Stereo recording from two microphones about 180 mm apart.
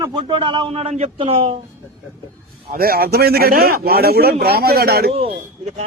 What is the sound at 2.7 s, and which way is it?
A man's voice, 55° right (ahead or behind).